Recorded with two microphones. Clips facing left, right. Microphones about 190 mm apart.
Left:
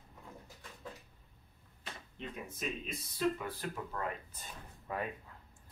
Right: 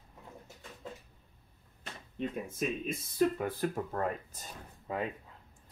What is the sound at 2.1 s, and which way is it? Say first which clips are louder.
Speech: right 9 dB; 50° right (ahead or behind).